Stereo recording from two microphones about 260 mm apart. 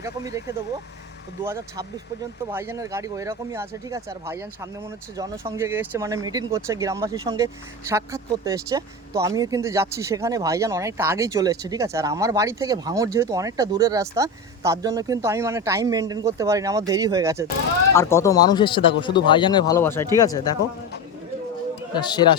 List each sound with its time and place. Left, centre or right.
0.0 s speech: centre
17.9 s speech: centre
21.9 s speech: centre